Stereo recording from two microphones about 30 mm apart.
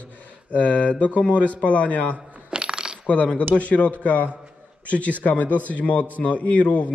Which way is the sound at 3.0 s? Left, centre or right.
Left.